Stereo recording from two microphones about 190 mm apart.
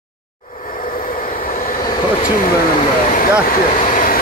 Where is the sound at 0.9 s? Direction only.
50° left (ahead or behind).